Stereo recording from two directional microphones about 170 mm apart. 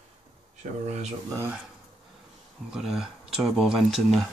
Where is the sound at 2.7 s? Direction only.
5° right (ahead or behind).